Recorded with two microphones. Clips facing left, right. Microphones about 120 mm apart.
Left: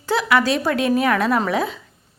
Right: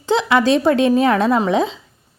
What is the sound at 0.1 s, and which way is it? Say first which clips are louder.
A woman's voice: right 4 dB; 25° right (ahead or behind).